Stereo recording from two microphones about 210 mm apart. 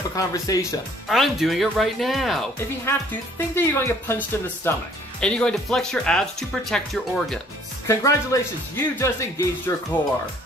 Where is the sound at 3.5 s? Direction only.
10° left (ahead or behind).